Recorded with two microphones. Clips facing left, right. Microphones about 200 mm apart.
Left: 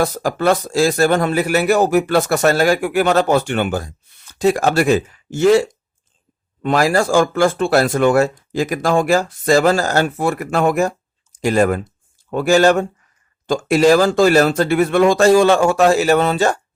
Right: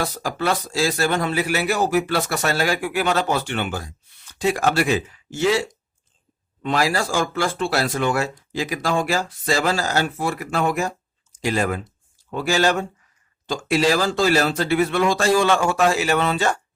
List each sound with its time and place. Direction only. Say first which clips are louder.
0.0 s speech: left 7 dB; 50° left (ahead or behind)